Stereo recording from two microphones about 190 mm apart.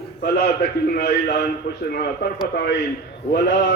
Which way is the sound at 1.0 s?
60° left (ahead or behind).